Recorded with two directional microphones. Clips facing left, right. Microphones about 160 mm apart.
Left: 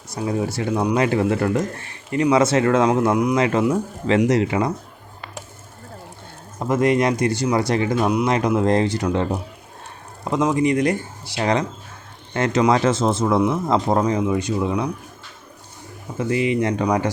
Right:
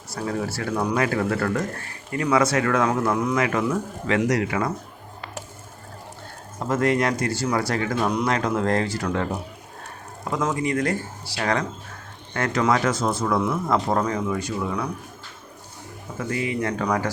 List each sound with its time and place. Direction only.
0.1 s speech: 20° left (ahead or behind)
6.6 s speech: 15° left (ahead or behind)
16.1 s speech: 20° left (ahead or behind)